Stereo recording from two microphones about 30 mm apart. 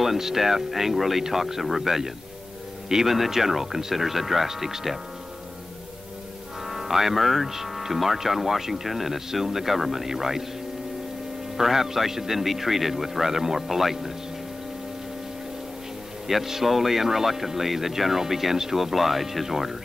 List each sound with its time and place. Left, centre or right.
0.0 s a man's voice: centre
6.7 s speech: centre
11.5 s speech: centre
16.3 s speech: centre